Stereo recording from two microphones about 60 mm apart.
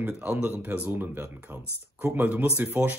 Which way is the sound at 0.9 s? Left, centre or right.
Right.